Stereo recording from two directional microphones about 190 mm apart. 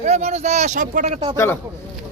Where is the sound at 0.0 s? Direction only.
35° right (ahead or behind).